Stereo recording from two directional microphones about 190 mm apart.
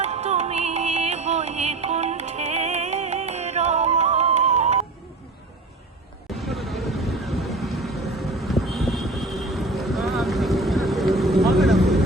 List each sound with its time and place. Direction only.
0.0 s music: 35° right (ahead or behind)
6.2 s vehicle: centre (ahead or behind)